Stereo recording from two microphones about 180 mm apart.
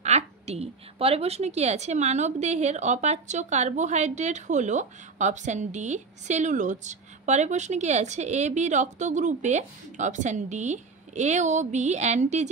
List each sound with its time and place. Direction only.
0.0 s a woman's voice: 35° right (ahead or behind)